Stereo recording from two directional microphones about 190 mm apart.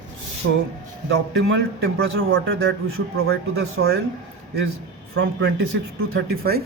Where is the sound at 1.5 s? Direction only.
60° right (ahead or behind).